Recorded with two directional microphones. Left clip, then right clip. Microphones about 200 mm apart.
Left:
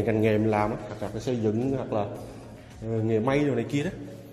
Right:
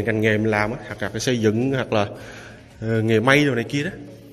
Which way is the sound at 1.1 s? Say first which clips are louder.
Right 7 dB; 25° right (ahead or behind).